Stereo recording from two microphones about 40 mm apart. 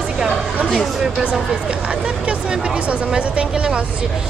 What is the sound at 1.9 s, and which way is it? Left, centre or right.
Speech, right.